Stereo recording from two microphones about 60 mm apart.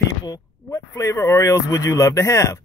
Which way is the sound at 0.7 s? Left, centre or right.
Left.